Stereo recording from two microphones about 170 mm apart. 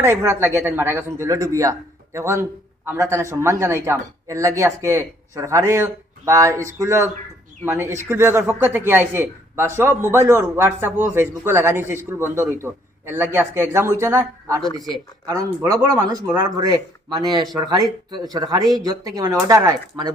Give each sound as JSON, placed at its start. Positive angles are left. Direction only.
{"t": 0.0, "sound": "speech", "side_deg": -15}